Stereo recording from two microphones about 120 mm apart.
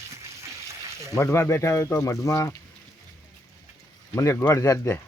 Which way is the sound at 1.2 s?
25° left (ahead or behind).